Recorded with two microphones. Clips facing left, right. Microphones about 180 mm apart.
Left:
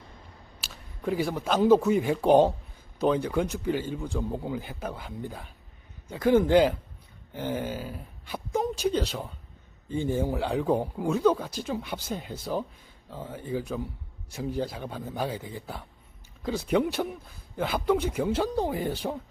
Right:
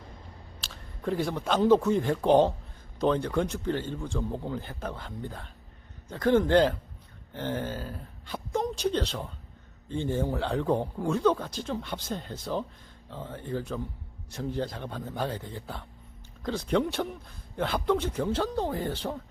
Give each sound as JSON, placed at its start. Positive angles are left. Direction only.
{"t": 0.6, "sound": "speech", "side_deg": 5}